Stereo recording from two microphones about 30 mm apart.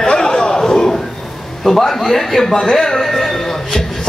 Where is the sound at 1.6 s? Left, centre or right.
Centre.